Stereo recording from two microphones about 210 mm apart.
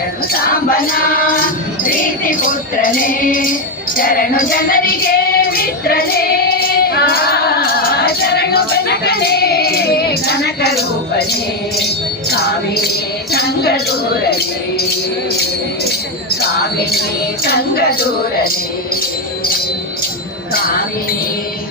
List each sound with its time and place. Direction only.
0.7 s music: 45° left (ahead or behind)
13.3 s music: 50° left (ahead or behind)
17.4 s music: 50° left (ahead or behind)